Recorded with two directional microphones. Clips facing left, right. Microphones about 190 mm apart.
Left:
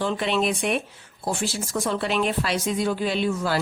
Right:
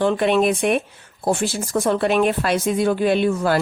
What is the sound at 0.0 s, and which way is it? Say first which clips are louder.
A woman's voice: right 7 dB; 55° right (ahead or behind).